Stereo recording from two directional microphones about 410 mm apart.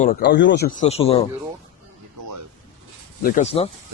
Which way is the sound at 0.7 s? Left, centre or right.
Centre.